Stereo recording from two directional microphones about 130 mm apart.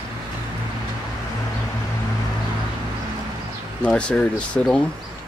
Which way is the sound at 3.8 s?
10° left (ahead or behind).